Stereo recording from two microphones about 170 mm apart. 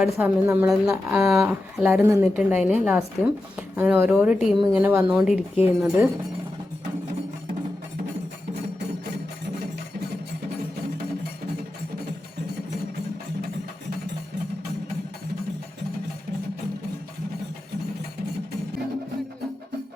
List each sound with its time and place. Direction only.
0.0 s a woman's voice: 10° right (ahead or behind)